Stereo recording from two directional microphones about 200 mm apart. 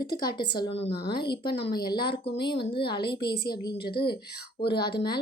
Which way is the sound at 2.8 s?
50° left (ahead or behind).